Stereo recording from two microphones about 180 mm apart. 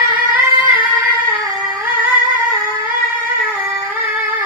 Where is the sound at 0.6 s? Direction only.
30° left (ahead or behind).